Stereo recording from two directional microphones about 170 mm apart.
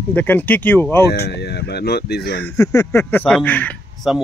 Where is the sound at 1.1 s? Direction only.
70° left (ahead or behind).